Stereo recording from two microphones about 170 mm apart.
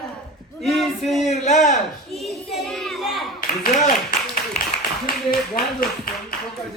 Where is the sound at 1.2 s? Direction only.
45° left (ahead or behind).